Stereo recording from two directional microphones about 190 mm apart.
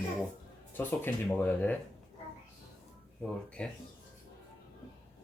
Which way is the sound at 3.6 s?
5° left (ahead or behind).